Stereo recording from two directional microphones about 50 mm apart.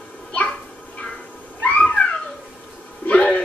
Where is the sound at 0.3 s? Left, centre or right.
Left.